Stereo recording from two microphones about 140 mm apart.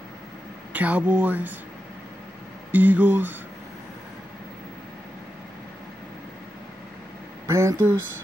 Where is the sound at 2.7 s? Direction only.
10° right (ahead or behind).